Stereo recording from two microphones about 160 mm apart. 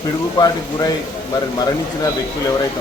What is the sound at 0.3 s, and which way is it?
Speech, 25° left (ahead or behind).